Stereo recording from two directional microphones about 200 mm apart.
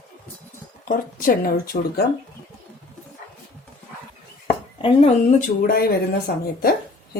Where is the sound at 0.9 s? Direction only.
45° left (ahead or behind).